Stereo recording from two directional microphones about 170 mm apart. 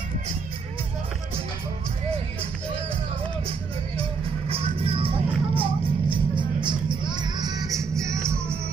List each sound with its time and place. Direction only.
4.5 s music: 35° right (ahead or behind); by 8.3 s 15° right (ahead or behind)